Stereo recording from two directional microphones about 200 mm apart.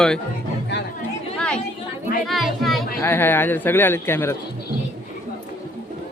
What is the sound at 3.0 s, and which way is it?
Speech, 10° left (ahead or behind).